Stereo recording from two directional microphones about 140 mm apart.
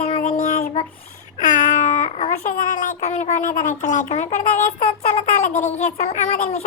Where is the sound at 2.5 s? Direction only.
65° left (ahead or behind).